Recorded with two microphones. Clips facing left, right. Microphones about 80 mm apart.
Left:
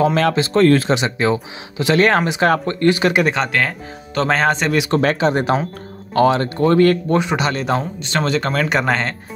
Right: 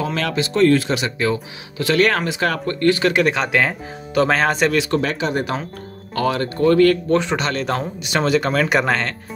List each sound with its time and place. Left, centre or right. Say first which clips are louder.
0.0 s speech: left 6 dB; left
0.9 s speech: left 3 dB; left
3.4 s speech: right 1 dB; centre
4.9 s speech: left 4 dB; left
7.1 s speech: left 1 dB; centre
7.8 s speech: even; centre